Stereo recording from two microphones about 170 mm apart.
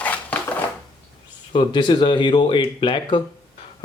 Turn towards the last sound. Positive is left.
turn(degrees=30)  # may be behind; listen again after turning